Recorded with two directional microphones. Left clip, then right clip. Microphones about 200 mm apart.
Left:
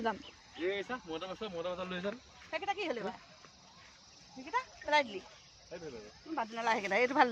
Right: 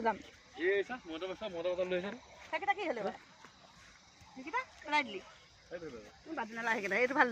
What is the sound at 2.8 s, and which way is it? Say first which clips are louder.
Speech: right 1 dB; 15° left (ahead or behind).